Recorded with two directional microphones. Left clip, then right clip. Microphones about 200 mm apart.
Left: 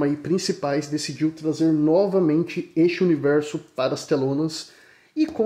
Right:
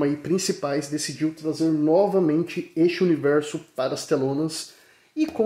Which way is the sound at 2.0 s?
30° right (ahead or behind).